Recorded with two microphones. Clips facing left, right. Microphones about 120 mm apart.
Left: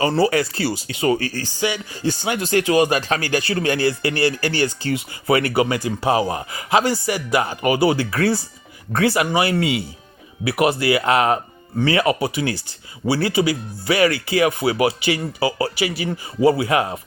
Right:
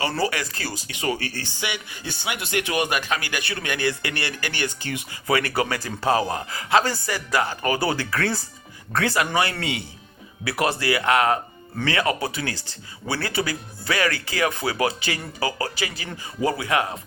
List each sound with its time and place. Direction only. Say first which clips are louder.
0.1 s speech: left 7 dB; 30° left (ahead or behind)
5.3 s speech: left 5 dB; 25° left (ahead or behind)